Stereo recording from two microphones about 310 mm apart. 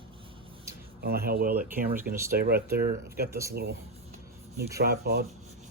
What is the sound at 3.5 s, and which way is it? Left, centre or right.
Speech, right.